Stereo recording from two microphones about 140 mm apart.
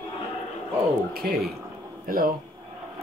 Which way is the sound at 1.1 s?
90° right.